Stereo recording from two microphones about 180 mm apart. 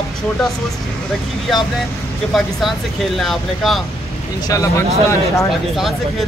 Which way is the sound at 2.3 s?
Centre (ahead or behind).